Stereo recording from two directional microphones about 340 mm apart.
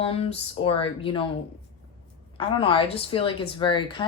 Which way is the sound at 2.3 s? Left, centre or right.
Centre.